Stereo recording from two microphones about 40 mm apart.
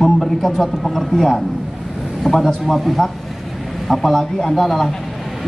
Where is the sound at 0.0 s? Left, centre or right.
Centre.